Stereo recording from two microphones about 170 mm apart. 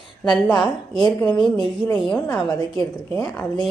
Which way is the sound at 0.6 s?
25° left (ahead or behind).